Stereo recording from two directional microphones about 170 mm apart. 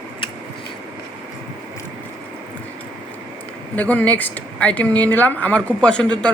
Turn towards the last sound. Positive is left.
turn(degrees=5)  # may be behind; listen again after turning